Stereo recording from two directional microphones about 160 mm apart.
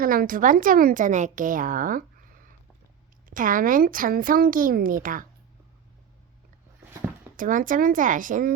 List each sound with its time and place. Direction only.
0.0 s a woman's voice: 60° right (ahead or behind)
3.2 s a woman's voice: 60° right (ahead or behind)
7.3 s a woman's voice: 55° right (ahead or behind)